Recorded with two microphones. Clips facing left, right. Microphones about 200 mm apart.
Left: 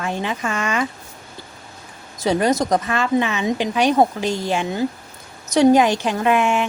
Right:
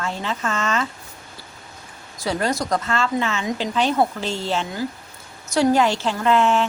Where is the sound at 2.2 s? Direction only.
20° left (ahead or behind).